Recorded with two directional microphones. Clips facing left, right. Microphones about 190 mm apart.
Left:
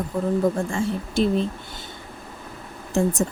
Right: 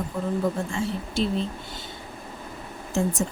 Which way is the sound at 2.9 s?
50° left (ahead or behind).